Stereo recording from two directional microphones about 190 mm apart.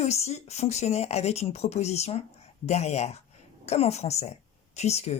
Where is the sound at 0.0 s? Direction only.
35° left (ahead or behind).